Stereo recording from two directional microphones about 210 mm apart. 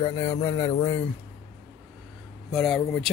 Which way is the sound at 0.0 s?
20° left (ahead or behind).